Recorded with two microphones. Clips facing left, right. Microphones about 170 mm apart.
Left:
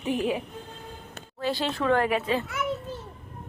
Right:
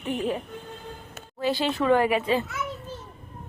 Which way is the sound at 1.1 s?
5° right (ahead or behind).